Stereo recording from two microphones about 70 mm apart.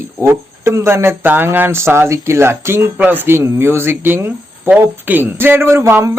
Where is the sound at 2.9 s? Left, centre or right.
Right.